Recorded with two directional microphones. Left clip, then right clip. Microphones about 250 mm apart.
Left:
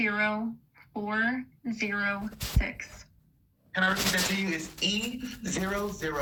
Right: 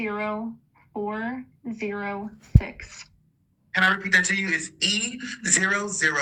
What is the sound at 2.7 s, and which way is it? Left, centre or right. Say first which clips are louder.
Speech: right 1 dB; right.